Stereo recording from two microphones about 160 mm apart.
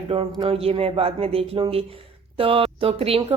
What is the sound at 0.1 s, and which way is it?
Speech, 45° right (ahead or behind).